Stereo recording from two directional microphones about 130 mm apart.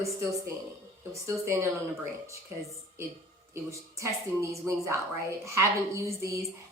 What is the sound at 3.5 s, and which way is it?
Speech, 25° right (ahead or behind).